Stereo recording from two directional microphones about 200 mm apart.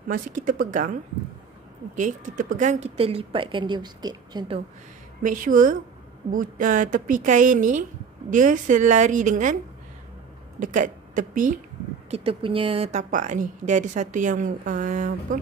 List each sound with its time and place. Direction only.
0.1 s speech: 40° right (ahead or behind)
2.0 s speech: 40° right (ahead or behind); by 4.6 s 20° right (ahead or behind)
5.2 s speech: 40° right (ahead or behind)
10.6 s a woman's voice: 40° right (ahead or behind)
12.1 s speech: 30° right (ahead or behind)